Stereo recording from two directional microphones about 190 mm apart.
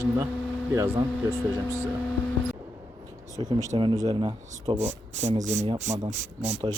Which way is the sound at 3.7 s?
25° right (ahead or behind).